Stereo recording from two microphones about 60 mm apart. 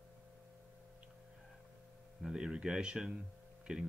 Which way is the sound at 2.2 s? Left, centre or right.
Centre.